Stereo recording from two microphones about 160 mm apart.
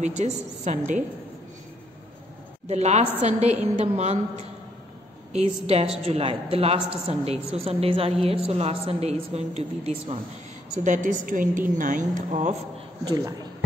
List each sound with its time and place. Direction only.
0.0 s a woman's voice: 45° right (ahead or behind)
2.7 s a woman's voice: 45° right (ahead or behind)
10.8 s a woman's voice: 55° right (ahead or behind)
13.0 s a man's voice: 25° right (ahead or behind)